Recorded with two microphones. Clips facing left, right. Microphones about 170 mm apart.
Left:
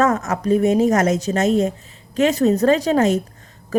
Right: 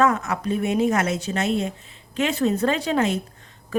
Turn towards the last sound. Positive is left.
turn(degrees=40)  # may be behind; listen again after turning